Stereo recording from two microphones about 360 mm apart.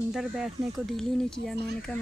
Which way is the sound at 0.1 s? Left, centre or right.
Centre.